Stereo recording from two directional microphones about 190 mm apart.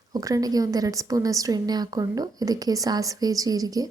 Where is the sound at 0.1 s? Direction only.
20° right (ahead or behind).